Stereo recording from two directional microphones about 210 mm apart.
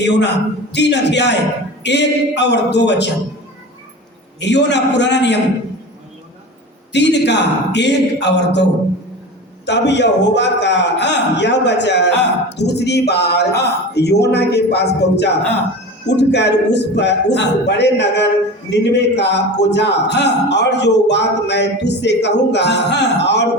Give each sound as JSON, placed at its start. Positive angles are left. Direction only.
{"t": 0.0, "sound": "a man's voice", "side_deg": 55}
{"t": 4.4, "sound": "a man's voice", "side_deg": 55}
{"t": 6.9, "sound": "a man's voice", "side_deg": 55}
{"t": 9.6, "sound": "a man's voice", "side_deg": 55}